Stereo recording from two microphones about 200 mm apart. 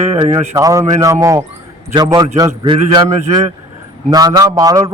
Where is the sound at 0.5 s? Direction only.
15° right (ahead or behind).